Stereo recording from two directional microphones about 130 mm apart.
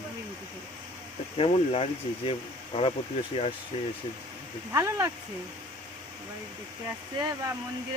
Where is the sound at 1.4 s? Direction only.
50° left (ahead or behind).